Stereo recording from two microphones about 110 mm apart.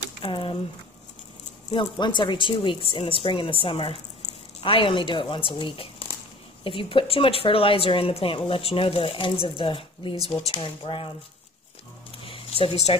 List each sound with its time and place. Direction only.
0.2 s speech: 50° left (ahead or behind)
1.7 s speech: 45° left (ahead or behind)
10.1 s speech: 35° right (ahead or behind)
10.5 s speech: 50° left (ahead or behind)
12.3 s zipper: 60° left (ahead or behind)